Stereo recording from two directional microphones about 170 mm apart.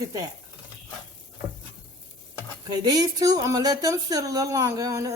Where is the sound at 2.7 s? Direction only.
20° right (ahead or behind).